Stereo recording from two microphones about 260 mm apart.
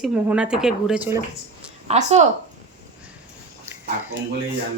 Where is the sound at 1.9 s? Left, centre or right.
Right.